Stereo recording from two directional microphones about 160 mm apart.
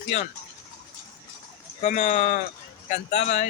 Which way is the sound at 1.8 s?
45° left (ahead or behind).